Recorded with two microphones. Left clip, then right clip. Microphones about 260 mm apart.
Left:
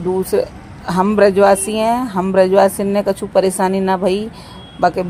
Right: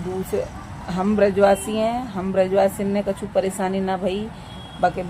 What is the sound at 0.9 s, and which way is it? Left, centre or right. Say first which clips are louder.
A man's voice: left 7 dB; left.